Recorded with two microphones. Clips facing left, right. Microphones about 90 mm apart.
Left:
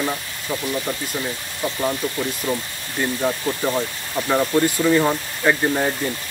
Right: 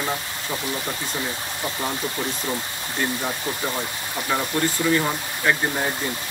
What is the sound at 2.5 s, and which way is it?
Speech, 15° right (ahead or behind).